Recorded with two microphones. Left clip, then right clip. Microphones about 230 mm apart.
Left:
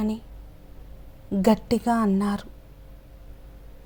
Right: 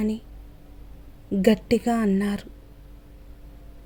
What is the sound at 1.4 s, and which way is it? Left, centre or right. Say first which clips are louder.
A woman's voice: right 1 dB; centre.